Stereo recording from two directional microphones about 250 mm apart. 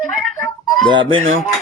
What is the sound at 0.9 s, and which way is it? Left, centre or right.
Speech, centre.